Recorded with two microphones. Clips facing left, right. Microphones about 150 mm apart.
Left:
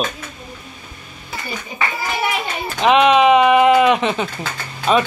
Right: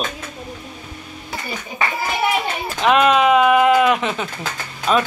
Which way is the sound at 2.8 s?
Centre (ahead or behind).